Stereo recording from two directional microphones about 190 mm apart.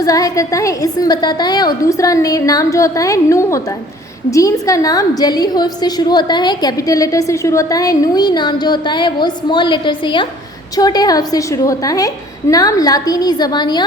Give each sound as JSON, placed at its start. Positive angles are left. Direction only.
{"t": 0.0, "sound": "a woman's voice", "side_deg": 20}